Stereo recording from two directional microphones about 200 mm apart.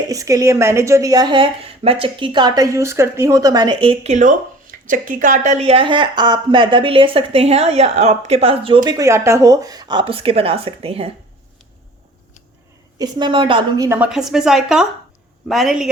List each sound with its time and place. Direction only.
0.1 s a woman's voice: 15° right (ahead or behind)
13.0 s a woman's voice: 20° right (ahead or behind)
14.1 s speech: 5° right (ahead or behind)